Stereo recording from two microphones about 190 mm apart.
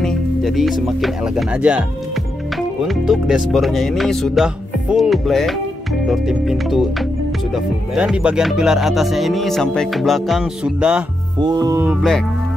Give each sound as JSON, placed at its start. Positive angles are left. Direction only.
{"t": 0.0, "sound": "speech", "side_deg": 0}
{"t": 11.4, "sound": "music", "side_deg": -20}